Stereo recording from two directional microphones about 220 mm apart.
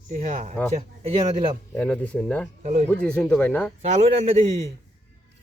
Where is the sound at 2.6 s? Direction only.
35° right (ahead or behind).